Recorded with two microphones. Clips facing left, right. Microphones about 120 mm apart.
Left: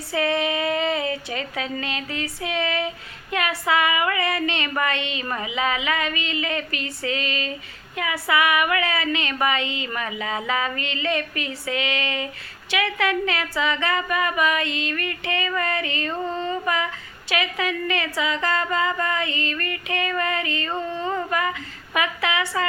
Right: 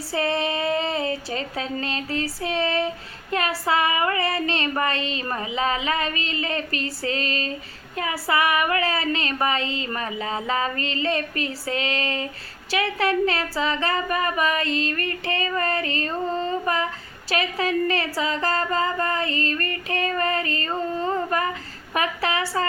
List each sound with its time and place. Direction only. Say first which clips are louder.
0.1 s speech: left 1 dB; 30° right (ahead or behind)